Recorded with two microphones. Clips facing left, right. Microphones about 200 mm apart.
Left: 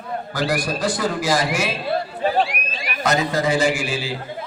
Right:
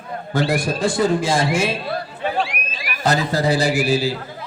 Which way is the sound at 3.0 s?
35° right (ahead or behind).